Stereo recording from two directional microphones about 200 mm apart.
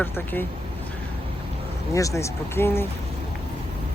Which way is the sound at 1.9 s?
15° left (ahead or behind).